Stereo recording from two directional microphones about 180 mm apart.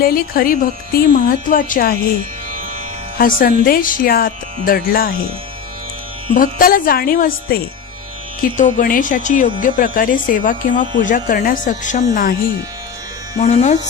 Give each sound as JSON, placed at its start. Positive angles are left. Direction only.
{"t": 0.0, "sound": "speech", "side_deg": 55}
{"t": 3.2, "sound": "speech", "side_deg": 50}
{"t": 6.3, "sound": "speech", "side_deg": 50}
{"t": 13.4, "sound": "speech", "side_deg": 40}